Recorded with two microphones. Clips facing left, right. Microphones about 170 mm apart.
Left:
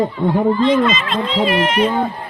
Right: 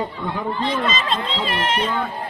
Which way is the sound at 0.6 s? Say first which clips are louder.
Left 7 dB; 30° right (ahead or behind).